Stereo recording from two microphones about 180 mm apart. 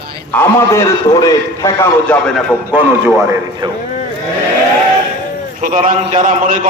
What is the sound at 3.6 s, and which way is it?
Speech, 25° right (ahead or behind).